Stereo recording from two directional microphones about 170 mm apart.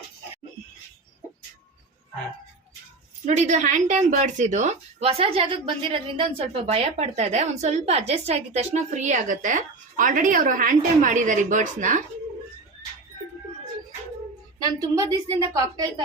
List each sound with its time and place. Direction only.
3.2 s a woman's voice: 45° right (ahead or behind)
14.6 s a woman's voice: 20° right (ahead or behind)